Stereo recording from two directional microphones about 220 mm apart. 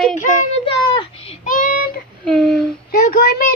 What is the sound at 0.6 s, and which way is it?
Speech, 25° left (ahead or behind).